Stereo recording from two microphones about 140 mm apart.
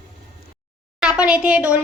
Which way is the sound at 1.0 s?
5° right (ahead or behind).